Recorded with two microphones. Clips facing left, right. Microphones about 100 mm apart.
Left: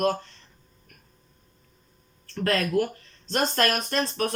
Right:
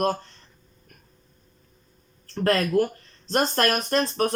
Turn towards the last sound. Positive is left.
turn(degrees=-35)  # may be behind; listen again after turning